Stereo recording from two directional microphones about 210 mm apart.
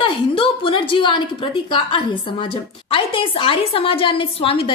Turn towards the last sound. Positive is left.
turn(degrees=25)  # may be behind; listen again after turning